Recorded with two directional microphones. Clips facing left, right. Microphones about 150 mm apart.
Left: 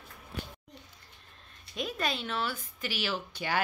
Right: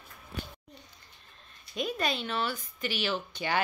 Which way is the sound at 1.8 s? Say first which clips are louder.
Right 2 dB; centre (ahead or behind).